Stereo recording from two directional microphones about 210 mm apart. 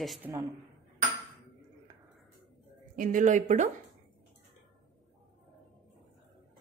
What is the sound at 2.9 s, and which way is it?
Speech, 40° right (ahead or behind).